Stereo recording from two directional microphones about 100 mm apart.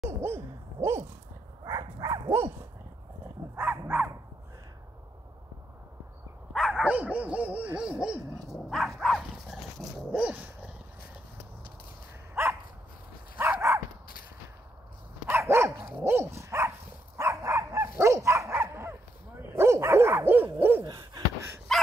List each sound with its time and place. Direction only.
0.2 s hoot: 25° right (ahead or behind)
1.6 s dog: 40° right (ahead or behind)
3.5 s dog: 20° right (ahead or behind)
6.5 s dog: centre (ahead or behind)
6.8 s dog: 15° right (ahead or behind)
13.4 s dog: 25° right (ahead or behind)
15.2 s dog: 25° right (ahead or behind)
20.8 s a sound: 45° right (ahead or behind)
21.7 s dog: centre (ahead or behind)